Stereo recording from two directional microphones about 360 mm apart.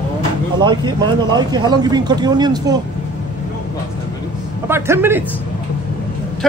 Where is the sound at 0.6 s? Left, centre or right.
Centre.